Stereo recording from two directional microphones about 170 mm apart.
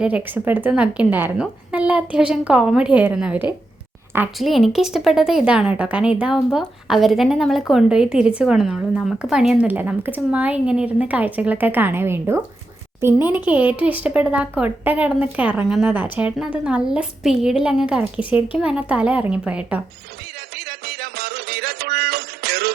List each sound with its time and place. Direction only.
0.0 s a woman's voice: 10° right (ahead or behind)
20.6 s music: 65° right (ahead or behind)